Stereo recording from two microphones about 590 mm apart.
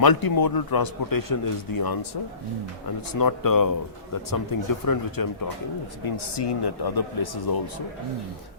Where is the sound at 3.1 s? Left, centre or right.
Left.